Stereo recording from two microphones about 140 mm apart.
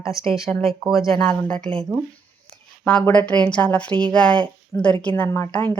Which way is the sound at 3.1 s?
10° left (ahead or behind).